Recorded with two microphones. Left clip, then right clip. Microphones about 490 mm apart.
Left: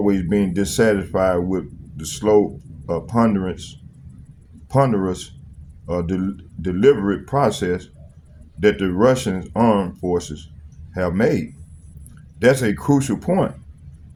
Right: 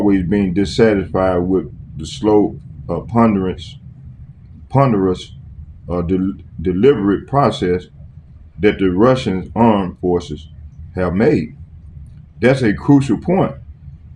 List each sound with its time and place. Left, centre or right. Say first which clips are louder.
0.0 s speech: right 4 dB; left
4.7 s speech: right 4 dB; left